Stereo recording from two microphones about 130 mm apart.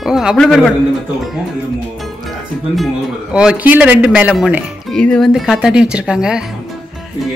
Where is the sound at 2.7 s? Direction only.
5° right (ahead or behind).